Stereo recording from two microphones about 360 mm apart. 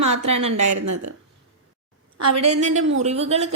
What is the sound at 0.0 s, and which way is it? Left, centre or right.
A woman's voice, right.